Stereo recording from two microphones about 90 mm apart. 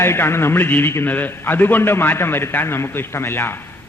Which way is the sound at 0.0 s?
25° left (ahead or behind).